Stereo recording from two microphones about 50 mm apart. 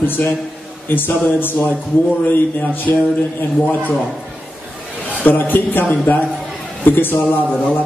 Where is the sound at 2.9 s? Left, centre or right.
Left.